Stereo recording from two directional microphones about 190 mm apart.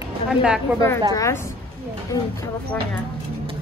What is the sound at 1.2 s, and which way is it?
Speech, 15° left (ahead or behind).